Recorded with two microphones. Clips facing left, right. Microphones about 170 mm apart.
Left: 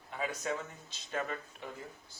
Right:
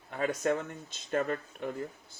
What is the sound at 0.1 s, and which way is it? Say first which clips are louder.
Speech: right 7 dB; 55° right (ahead or behind).